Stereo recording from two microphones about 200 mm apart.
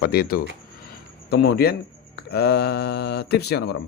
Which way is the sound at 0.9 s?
50° left (ahead or behind).